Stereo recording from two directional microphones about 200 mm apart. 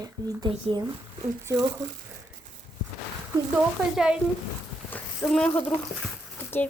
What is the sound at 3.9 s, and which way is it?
Speech, 5° right (ahead or behind).